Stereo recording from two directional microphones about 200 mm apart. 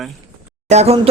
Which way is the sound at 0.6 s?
30° right (ahead or behind).